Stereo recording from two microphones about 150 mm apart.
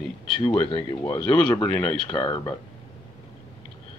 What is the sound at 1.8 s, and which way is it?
Speech, 30° left (ahead or behind).